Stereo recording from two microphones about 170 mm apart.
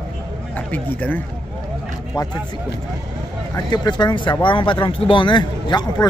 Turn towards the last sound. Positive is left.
turn(degrees=25)  # may be behind; listen again after turning